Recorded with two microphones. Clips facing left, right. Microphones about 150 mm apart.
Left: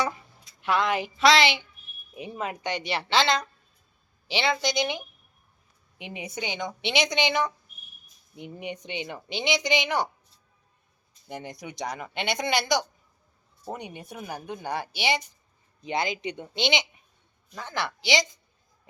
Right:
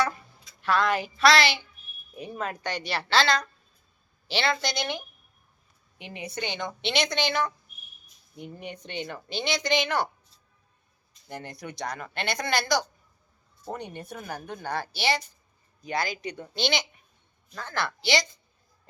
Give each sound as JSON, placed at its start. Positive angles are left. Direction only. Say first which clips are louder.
{"t": 0.6, "sound": "a woman's voice", "louder": "even", "side_deg": 20}
{"t": 11.3, "sound": "a woman's voice", "louder": "left 1 dB", "side_deg": 15}